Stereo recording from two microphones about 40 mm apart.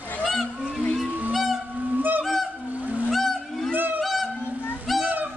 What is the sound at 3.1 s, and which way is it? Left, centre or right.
Whale vocalization, centre.